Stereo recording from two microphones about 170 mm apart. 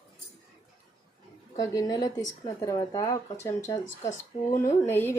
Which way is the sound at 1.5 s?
20° left (ahead or behind).